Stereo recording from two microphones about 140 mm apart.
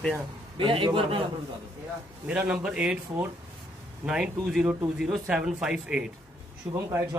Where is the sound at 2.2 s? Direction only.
5° right (ahead or behind).